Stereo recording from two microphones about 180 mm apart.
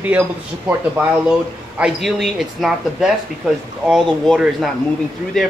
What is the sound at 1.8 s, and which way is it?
Speech, 5° right (ahead or behind).